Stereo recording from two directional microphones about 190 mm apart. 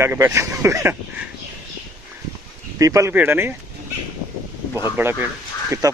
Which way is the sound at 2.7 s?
15° right (ahead or behind).